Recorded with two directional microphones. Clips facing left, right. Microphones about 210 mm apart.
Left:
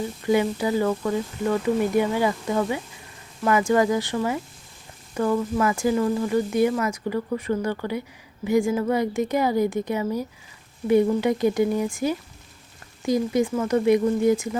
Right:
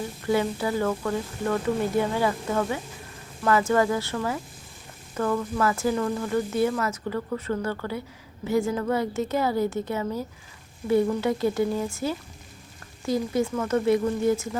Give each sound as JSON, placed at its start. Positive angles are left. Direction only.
{"t": 0.3, "sound": "speech", "side_deg": 15}